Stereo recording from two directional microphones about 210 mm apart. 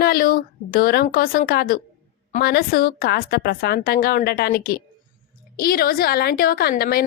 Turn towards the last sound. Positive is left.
turn(degrees=45)  # may be behind; listen again after turning